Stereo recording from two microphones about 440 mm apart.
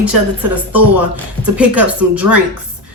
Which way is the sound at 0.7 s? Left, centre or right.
Right.